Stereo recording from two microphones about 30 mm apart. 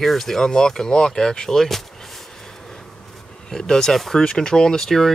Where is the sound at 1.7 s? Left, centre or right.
Centre.